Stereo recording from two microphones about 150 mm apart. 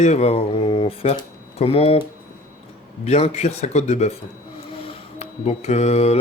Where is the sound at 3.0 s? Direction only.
45° left (ahead or behind).